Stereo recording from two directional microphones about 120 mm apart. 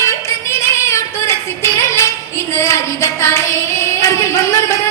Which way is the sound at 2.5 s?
25° left (ahead or behind).